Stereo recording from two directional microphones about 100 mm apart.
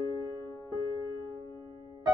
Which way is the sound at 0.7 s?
30° left (ahead or behind).